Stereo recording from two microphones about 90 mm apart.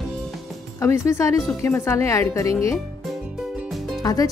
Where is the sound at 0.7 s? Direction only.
35° left (ahead or behind).